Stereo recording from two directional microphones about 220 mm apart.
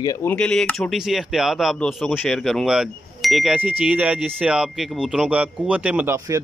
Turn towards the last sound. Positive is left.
turn(degrees=-10)  # may be behind; listen again after turning